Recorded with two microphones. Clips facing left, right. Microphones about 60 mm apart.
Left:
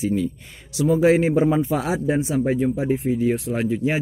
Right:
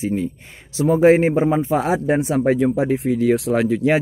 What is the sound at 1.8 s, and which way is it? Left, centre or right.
Speech, right.